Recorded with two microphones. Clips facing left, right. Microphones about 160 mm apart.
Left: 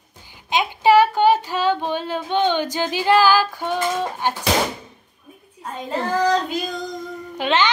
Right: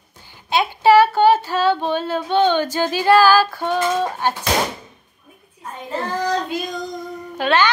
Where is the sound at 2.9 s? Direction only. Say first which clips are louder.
Right 3 dB; 15° left (ahead or behind).